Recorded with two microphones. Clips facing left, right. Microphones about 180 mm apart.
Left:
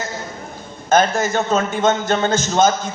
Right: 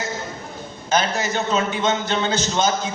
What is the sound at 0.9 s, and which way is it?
A man's voice, 50° left (ahead or behind).